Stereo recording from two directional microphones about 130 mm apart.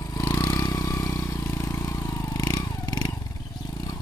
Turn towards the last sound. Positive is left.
turn(degrees=25)  # may be behind; listen again after turning